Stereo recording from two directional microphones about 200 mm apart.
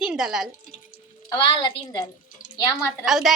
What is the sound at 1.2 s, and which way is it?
A woman's voice, 25° left (ahead or behind).